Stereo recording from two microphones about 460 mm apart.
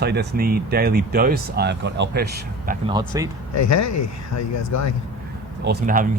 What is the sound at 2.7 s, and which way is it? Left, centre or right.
Speech, centre.